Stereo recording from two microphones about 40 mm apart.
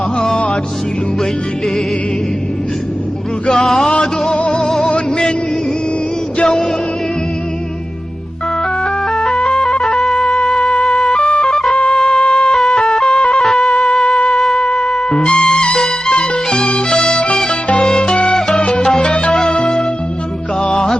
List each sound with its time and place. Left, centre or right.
0.2 s music: left
3.5 s a sound: centre
4.0 s music: centre
4.9 s music: left
6.4 s music: centre
8.8 s music: centre
13.6 s music: centre